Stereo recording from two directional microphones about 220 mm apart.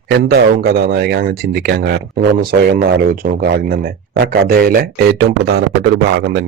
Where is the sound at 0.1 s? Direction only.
45° right (ahead or behind).